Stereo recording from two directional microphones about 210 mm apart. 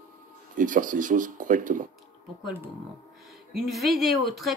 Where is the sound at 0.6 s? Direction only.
40° right (ahead or behind).